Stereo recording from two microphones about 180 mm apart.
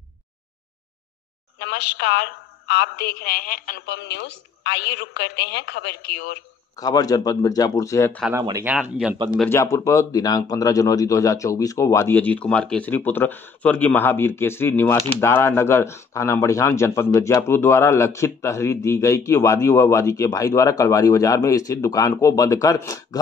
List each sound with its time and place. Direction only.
1.6 s a woman's voice: 65° left (ahead or behind)
6.8 s speech: 20° left (ahead or behind)
8.3 s speech: 20° right (ahead or behind)
9.5 s speech: 15° left (ahead or behind)